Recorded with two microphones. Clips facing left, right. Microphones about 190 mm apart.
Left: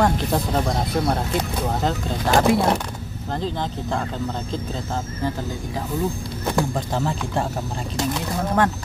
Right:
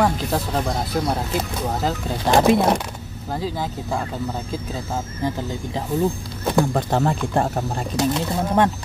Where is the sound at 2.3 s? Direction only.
20° right (ahead or behind).